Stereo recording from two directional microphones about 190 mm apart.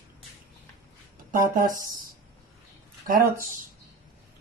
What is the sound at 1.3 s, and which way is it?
Speech, 50° right (ahead or behind).